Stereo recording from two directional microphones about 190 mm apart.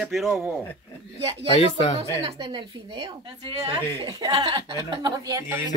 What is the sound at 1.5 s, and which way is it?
Speech, 30° left (ahead or behind).